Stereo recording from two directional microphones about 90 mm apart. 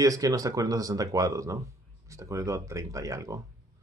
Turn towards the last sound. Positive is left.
turn(degrees=-35)  # may be behind; listen again after turning